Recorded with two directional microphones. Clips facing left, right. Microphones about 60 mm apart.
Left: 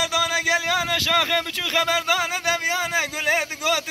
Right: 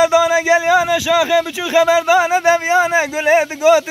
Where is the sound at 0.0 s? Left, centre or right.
Right.